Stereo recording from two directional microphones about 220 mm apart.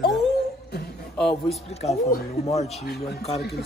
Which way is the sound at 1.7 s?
30° left (ahead or behind).